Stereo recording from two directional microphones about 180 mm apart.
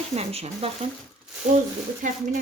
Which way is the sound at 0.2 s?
35° right (ahead or behind).